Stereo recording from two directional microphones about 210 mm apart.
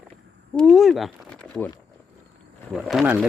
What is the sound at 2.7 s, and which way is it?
Speech, centre (ahead or behind).